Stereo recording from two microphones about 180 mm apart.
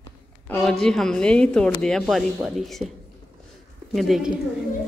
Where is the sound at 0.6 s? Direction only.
Centre (ahead or behind).